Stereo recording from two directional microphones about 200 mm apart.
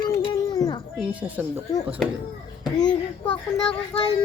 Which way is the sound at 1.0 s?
5° right (ahead or behind).